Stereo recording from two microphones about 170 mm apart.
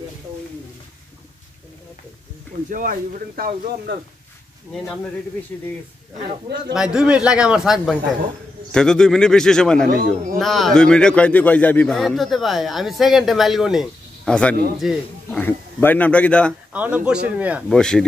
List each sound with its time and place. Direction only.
2.7 s speech: 50° right (ahead or behind)
6.7 s a man's voice: 5° right (ahead or behind)
9.8 s speech: 55° right (ahead or behind)
10.4 s a man's voice: centre (ahead or behind)
15.4 s speech: 10° left (ahead or behind)
16.7 s a man's voice: 10° right (ahead or behind)
17.7 s a man's voice: 5° left (ahead or behind)